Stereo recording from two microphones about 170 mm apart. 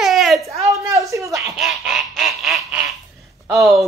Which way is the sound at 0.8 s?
20° right (ahead or behind).